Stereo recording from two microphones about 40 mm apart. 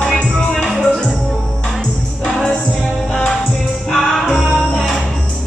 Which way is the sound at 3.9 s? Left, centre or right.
Centre.